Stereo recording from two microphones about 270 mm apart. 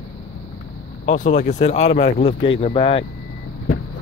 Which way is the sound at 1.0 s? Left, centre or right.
Left.